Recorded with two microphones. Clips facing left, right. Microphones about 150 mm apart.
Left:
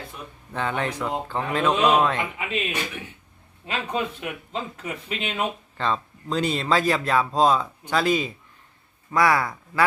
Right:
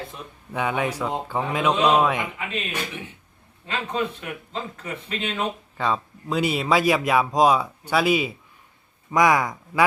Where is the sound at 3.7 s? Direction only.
10° left (ahead or behind).